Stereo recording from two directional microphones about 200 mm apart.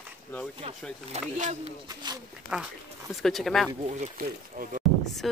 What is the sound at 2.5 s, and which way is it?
Speech, 5° right (ahead or behind).